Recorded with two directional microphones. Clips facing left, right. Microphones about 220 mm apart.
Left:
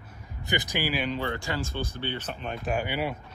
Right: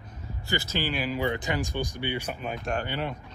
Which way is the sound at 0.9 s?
Centre (ahead or behind).